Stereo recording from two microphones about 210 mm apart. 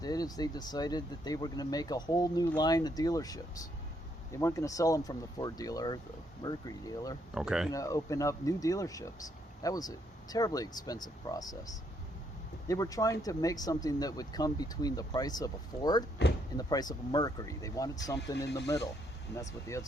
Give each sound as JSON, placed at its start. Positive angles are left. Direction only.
{"t": 0.0, "sound": "speech", "side_deg": 20}
{"t": 7.3, "sound": "speech", "side_deg": -5}
{"t": 7.7, "sound": "speech", "side_deg": 15}
{"t": 18.3, "sound": "speech", "side_deg": 55}
{"t": 19.3, "sound": "speech", "side_deg": 15}